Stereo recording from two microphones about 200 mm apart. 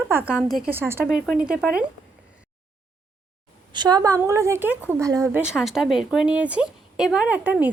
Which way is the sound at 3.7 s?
20° right (ahead or behind).